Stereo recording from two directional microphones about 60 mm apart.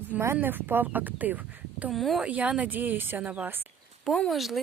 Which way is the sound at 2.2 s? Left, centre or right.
Right.